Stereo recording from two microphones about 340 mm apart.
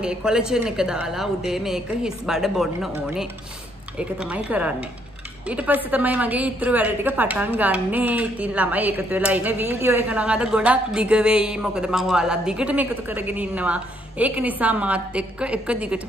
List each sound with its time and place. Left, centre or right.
0.0 s a woman's voice: centre